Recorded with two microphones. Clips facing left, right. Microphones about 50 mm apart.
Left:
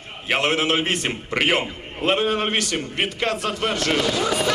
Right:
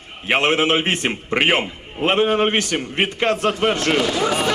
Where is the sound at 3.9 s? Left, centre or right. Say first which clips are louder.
Right 2 dB; centre.